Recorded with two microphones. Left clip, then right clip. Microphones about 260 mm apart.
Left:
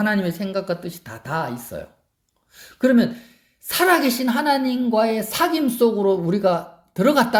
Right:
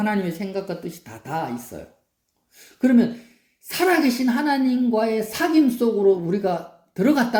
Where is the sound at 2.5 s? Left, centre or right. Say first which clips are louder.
Left 2 dB; left.